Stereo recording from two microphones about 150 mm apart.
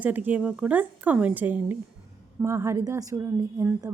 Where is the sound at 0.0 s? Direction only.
10° right (ahead or behind).